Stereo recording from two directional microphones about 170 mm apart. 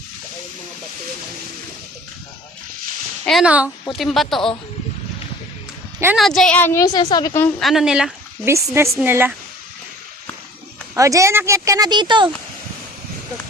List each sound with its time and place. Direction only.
3.2 s speech: centre (ahead or behind)
6.1 s a woman's voice: centre (ahead or behind); by 7.3 s 25° left (ahead or behind)
7.6 s speech: centre (ahead or behind)
8.4 s a woman's voice: 15° right (ahead or behind)
10.9 s speech: 20° right (ahead or behind)